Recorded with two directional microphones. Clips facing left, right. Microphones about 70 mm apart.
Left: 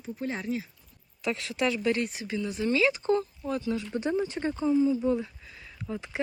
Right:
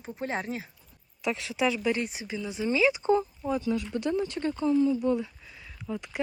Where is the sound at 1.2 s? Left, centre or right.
Centre.